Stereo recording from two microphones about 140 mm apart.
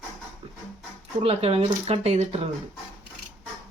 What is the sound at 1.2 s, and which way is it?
Speech, 45° right (ahead or behind).